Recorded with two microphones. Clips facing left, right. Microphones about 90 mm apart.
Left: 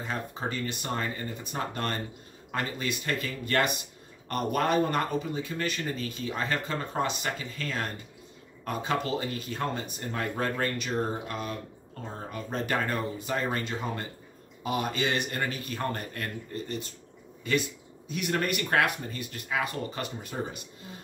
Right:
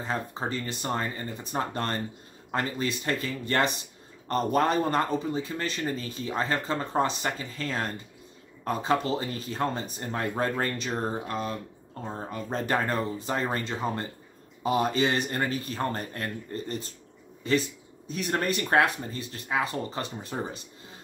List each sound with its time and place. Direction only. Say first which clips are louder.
0.0 s speech: right 2 dB; 30° right (ahead or behind)